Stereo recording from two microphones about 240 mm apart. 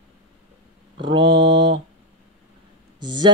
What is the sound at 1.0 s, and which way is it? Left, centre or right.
Mantra, centre.